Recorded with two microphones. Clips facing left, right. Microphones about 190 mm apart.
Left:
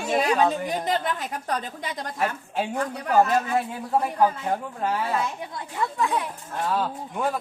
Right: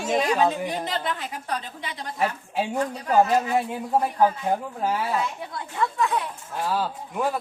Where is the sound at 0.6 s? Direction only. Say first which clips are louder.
Left 2 dB; 45° left (ahead or behind).